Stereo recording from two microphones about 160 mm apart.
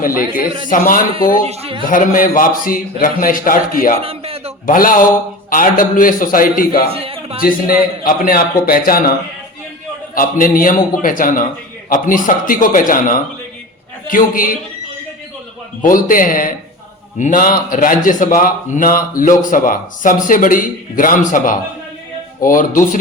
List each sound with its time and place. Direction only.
0.7 s a man's voice: 60° left (ahead or behind)
1.1 s speech: 35° right (ahead or behind)
1.9 s a man's voice: 60° left (ahead or behind)
4.0 s a sound: 35° right (ahead or behind)
4.6 s a man's voice: 60° left (ahead or behind)
6.9 s a sound: 35° right (ahead or behind)
8.0 s a man's voice: 65° left (ahead or behind)
10.2 s a man's voice: 60° left (ahead or behind)
15.8 s a man's voice: 60° left (ahead or behind)